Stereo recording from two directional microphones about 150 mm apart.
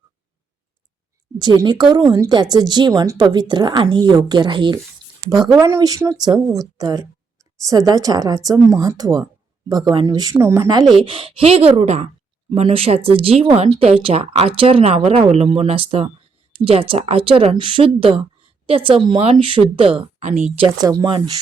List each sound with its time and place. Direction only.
1.4 s speech: 30° right (ahead or behind)
11.0 s speech: 35° right (ahead or behind)
20.1 s speech: 55° right (ahead or behind)
20.7 s speech: 25° right (ahead or behind)